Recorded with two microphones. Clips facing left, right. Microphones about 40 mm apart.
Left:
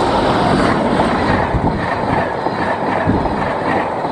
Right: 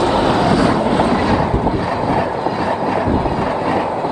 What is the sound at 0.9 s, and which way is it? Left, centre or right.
Thunder, left.